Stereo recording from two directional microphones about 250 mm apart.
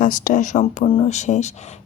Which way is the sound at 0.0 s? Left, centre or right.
Left.